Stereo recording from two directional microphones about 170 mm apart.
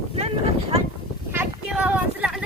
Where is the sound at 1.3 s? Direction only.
10° right (ahead or behind).